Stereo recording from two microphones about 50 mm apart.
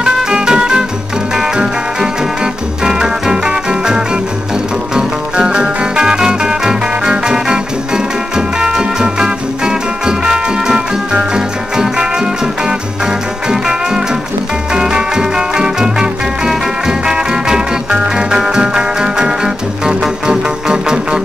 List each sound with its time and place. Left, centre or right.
0.0 s music: centre